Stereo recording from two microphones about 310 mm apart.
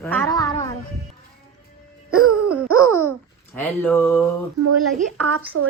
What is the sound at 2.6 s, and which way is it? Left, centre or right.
Speech, right.